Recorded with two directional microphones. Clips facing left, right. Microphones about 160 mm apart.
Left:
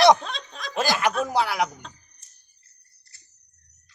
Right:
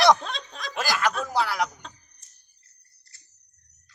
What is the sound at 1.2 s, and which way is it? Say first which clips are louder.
Speech: left 2 dB; 20° left (ahead or behind).